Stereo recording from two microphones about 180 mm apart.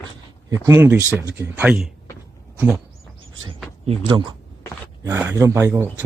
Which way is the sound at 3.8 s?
30° right (ahead or behind).